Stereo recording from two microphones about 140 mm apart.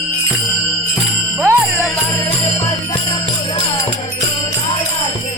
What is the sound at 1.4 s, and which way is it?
Jingle bell, 15° right (ahead or behind).